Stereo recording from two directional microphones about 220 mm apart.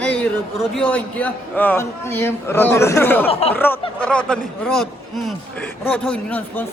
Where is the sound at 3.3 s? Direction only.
25° left (ahead or behind).